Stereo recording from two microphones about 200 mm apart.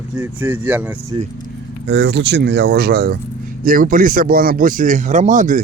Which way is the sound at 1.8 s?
60° right (ahead or behind).